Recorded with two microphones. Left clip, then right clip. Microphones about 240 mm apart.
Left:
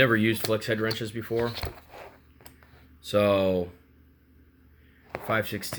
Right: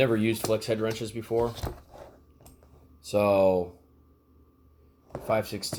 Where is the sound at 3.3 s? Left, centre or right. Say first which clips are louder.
Right 2 dB; centre.